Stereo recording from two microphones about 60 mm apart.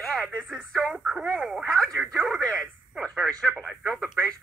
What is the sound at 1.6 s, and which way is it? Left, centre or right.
Speech, centre.